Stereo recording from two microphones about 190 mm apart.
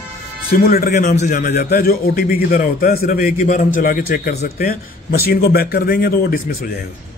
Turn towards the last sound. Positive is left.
turn(degrees=50)  # may be behind; listen again after turning